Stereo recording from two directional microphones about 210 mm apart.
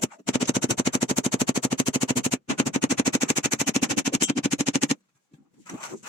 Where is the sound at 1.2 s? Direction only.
30° left (ahead or behind).